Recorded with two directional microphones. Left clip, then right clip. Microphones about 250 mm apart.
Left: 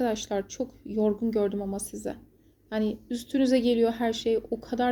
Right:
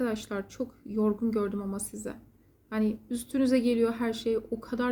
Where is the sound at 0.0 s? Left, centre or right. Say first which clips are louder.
Left 4 dB; centre.